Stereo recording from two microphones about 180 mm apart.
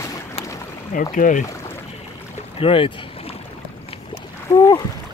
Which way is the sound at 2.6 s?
30° left (ahead or behind).